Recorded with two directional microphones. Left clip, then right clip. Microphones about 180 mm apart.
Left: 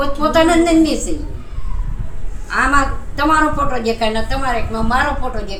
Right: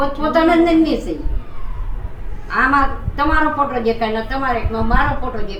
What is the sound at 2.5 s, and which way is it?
A woman's voice, 25° left (ahead or behind).